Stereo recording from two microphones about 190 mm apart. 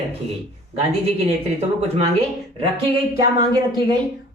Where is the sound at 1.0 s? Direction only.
30° right (ahead or behind).